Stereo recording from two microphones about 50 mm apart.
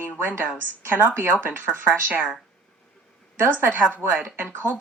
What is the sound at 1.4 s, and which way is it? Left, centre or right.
Speech, right.